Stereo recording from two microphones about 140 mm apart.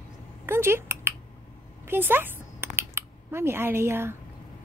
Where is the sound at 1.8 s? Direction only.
15° right (ahead or behind).